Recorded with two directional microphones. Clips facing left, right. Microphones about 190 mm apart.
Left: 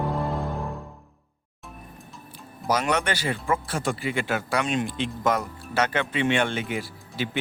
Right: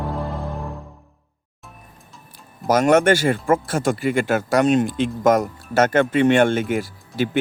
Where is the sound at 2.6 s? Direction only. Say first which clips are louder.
Right 10 dB; 45° right (ahead or behind).